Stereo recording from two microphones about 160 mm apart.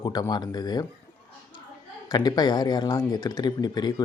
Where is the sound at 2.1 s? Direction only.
25° left (ahead or behind).